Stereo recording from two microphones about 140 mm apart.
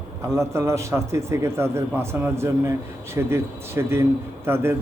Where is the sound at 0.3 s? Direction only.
20° right (ahead or behind).